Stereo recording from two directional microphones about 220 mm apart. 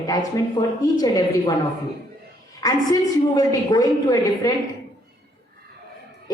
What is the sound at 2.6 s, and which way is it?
A woman's voice, 15° left (ahead or behind).